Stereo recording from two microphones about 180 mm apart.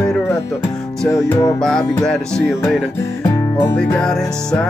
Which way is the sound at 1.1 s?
20° left (ahead or behind).